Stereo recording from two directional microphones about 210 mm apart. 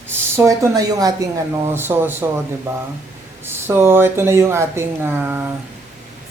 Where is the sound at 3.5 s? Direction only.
10° right (ahead or behind).